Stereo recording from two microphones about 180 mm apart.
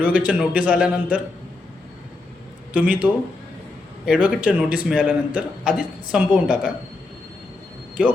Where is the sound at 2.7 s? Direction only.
10° right (ahead or behind).